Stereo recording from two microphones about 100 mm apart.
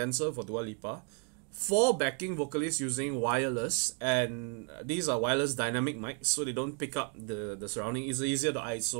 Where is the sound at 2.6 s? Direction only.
30° right (ahead or behind).